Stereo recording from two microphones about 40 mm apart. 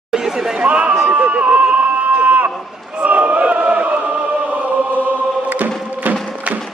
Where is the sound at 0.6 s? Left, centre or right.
Right.